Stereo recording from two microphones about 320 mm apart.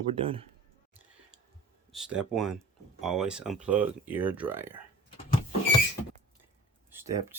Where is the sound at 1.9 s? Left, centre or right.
Centre.